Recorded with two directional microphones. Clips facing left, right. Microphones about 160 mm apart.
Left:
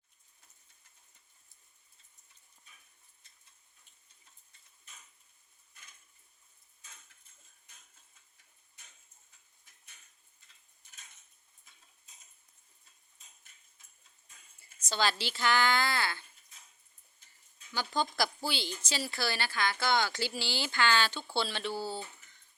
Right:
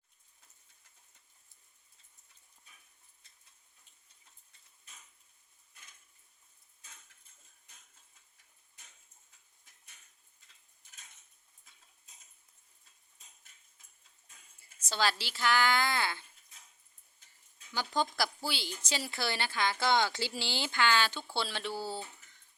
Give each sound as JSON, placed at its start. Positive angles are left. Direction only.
{"t": 14.8, "sound": "speech", "side_deg": -5}
{"t": 17.7, "sound": "speech", "side_deg": -15}
{"t": 18.8, "sound": "speech", "side_deg": -20}